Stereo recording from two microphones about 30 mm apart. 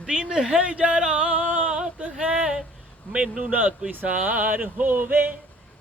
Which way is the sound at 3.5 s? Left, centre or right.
Right.